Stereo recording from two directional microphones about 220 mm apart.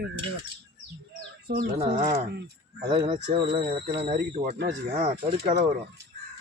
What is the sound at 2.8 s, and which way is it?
Speech, 25° right (ahead or behind).